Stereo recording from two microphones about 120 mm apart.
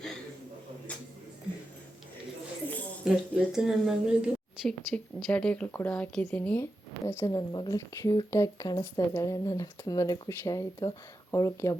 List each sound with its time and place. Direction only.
3.0 s a woman's voice: 5° right (ahead or behind); by 7.3 s 20° left (ahead or behind)
7.3 s a woman's voice: 35° left (ahead or behind)